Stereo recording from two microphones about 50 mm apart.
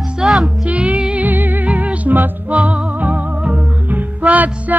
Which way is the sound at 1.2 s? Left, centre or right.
Right.